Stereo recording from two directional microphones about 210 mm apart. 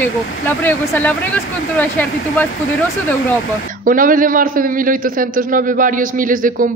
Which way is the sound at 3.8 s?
40° right (ahead or behind).